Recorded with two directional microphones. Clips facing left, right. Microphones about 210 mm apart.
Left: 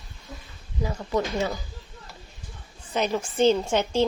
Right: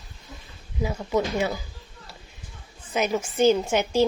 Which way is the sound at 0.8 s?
5° right (ahead or behind).